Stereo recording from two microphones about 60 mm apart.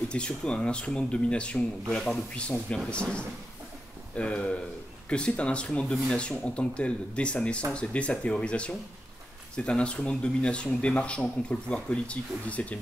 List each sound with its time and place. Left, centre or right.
0.1 s speech: centre